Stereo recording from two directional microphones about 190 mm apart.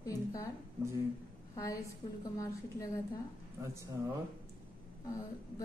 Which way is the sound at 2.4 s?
20° left (ahead or behind).